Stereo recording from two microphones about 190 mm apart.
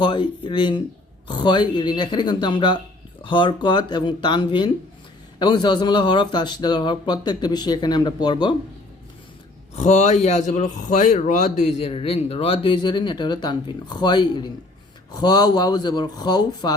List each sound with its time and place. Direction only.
0.0 s a man's voice: 25° left (ahead or behind)
9.7 s a man's voice: 35° left (ahead or behind); by 16.7 s 20° left (ahead or behind)